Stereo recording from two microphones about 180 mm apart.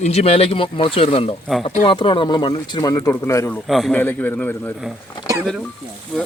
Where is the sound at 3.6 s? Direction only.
Centre (ahead or behind).